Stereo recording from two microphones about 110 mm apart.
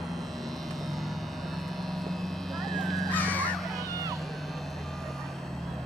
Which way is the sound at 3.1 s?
15° left (ahead or behind).